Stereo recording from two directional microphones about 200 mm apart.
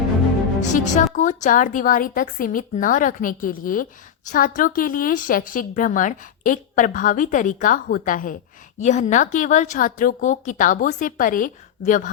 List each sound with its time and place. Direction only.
0.6 s speech: 40° left (ahead or behind)